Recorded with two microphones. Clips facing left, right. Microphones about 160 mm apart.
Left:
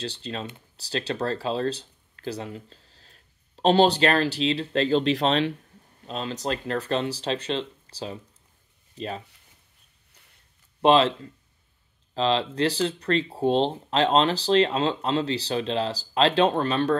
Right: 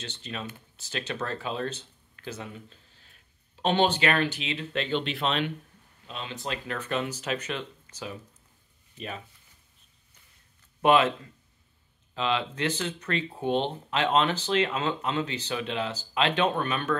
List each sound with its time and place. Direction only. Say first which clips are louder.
0.0 s speech: left 5 dB; 35° left (ahead or behind)
10.8 s speech: left 3 dB; 30° left (ahead or behind)